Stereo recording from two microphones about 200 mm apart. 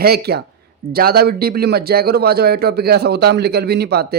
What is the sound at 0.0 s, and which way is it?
Speech, 50° right (ahead or behind).